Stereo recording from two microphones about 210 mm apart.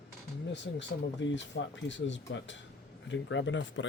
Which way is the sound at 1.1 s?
60° left (ahead or behind).